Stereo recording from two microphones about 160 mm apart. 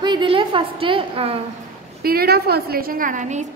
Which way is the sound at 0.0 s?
30° right (ahead or behind).